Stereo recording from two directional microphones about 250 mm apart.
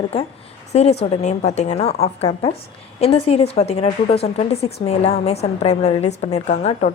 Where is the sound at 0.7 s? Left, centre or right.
Left.